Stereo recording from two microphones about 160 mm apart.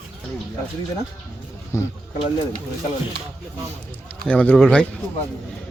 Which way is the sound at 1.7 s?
15° left (ahead or behind).